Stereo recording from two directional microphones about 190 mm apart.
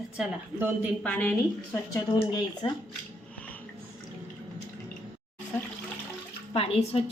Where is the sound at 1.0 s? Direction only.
10° left (ahead or behind).